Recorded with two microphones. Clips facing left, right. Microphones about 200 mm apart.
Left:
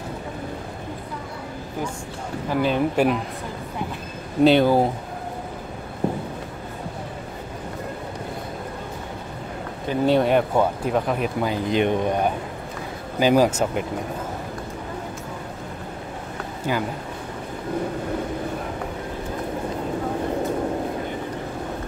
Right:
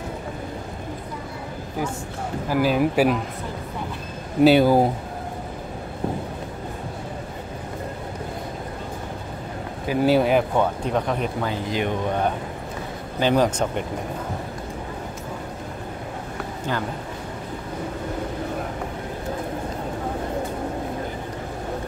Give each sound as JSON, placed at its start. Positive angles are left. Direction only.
{"t": 2.5, "sound": "speech", "side_deg": -5}
{"t": 4.4, "sound": "speech", "side_deg": -5}
{"t": 9.8, "sound": "speech", "side_deg": -5}
{"t": 11.4, "sound": "speech", "side_deg": 20}
{"t": 13.2, "sound": "speech", "side_deg": 10}